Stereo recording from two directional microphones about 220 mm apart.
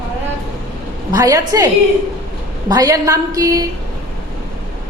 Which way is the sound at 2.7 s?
15° right (ahead or behind).